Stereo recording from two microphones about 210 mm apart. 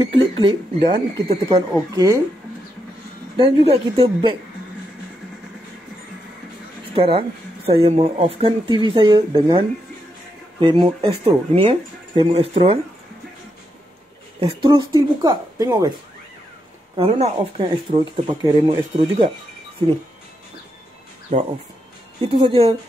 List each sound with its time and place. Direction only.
0.0 s a sound: 25° right (ahead or behind)
0.9 s speech: 25° right (ahead or behind)
3.3 s speech: 30° right (ahead or behind)
7.0 s speech: 25° right (ahead or behind)
14.4 s speech: 25° right (ahead or behind)
16.9 s speech: 25° right (ahead or behind)
22.2 s speech: 25° right (ahead or behind)